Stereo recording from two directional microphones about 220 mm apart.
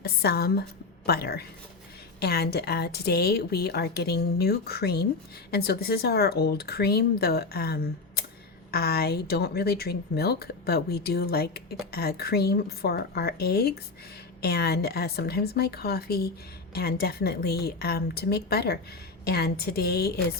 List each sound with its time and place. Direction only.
0.0 s speech: 45° left (ahead or behind)